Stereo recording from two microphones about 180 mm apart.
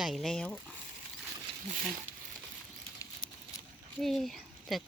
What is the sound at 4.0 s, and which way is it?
Speech, centre (ahead or behind).